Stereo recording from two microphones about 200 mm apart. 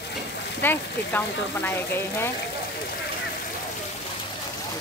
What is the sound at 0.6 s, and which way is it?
Speech, 10° left (ahead or behind).